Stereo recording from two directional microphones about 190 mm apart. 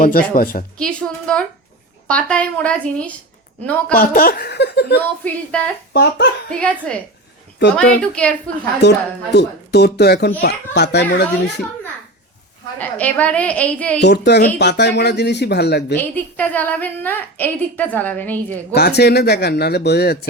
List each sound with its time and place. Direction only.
0.0 s a woman's voice: 50° left (ahead or behind)
0.8 s a woman's voice: 5° left (ahead or behind)
3.9 s a child's voice: 50° left (ahead or behind)
5.5 s a woman's voice: 5° left (ahead or behind)
5.9 s a child's voice: 60° left (ahead or behind)
6.5 s a woman's voice: 5° left (ahead or behind)
8.8 s a child's voice: 65° left (ahead or behind)
12.8 s a woman's voice: 10° left (ahead or behind)
14.0 s a child's voice: 60° left (ahead or behind)
16.0 s a woman's voice: 10° left (ahead or behind)
18.7 s a child's voice: 60° left (ahead or behind)